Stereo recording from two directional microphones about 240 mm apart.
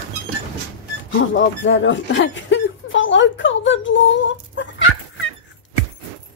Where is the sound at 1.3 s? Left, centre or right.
Left.